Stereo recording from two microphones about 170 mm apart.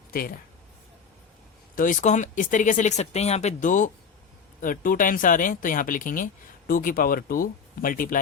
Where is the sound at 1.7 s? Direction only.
50° left (ahead or behind).